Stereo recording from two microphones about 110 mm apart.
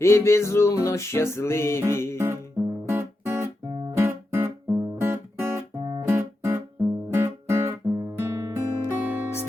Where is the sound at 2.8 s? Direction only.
20° right (ahead or behind).